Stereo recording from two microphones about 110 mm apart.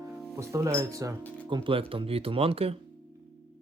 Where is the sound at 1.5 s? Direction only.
50° right (ahead or behind).